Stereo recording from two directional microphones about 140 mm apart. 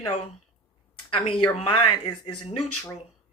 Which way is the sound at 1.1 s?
35° left (ahead or behind).